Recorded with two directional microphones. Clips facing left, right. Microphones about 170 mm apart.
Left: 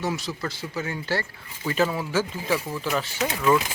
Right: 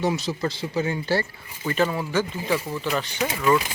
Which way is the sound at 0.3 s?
20° right (ahead or behind).